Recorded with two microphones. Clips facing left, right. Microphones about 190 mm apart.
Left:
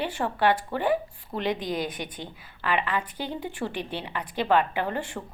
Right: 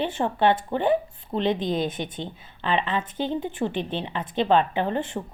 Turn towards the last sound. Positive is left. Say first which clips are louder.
# right 4 dB
turn(degrees=-20)  # may be behind; listen again after turning